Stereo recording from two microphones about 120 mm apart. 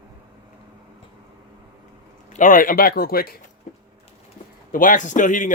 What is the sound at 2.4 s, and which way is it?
Speech, 90° left.